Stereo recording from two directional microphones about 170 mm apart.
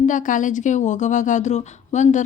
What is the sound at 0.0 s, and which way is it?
Speech, 50° left (ahead or behind).